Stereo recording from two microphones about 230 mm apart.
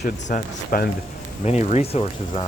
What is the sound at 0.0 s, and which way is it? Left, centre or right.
Speech, left.